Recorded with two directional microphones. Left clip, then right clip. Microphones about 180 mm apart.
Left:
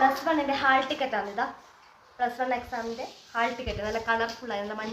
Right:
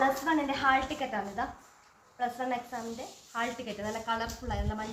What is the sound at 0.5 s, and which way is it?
A woman's voice, 15° left (ahead or behind).